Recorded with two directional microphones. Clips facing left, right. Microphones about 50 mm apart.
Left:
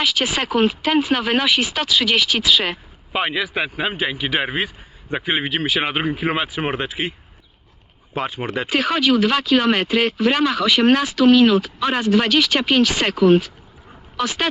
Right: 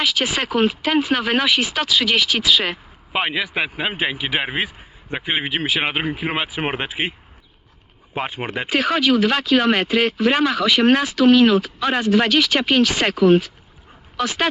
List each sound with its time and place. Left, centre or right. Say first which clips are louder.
0.0 s a man's voice: even; centre
5.5 s a man's voice: even; centre
8.3 s speech: left 1 dB; right
8.7 s a man's voice: even; centre